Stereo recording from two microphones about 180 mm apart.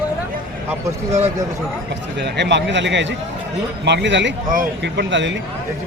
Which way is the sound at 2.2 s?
75° right (ahead or behind).